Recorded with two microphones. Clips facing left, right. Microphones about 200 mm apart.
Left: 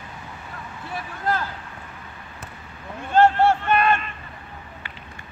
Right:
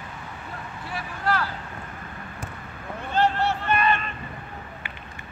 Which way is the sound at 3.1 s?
50° left (ahead or behind).